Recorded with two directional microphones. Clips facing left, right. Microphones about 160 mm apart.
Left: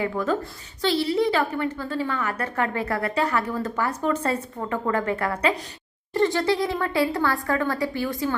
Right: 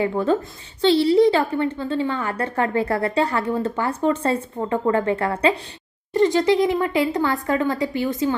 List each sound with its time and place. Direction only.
0.0 s a woman's voice: 30° right (ahead or behind)